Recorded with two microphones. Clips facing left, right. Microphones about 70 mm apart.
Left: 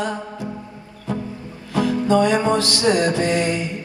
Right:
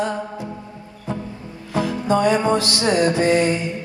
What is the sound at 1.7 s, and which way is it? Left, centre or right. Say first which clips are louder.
Music: left 2 dB; right.